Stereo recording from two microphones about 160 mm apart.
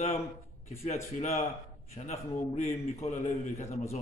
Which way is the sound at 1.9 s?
45° left (ahead or behind).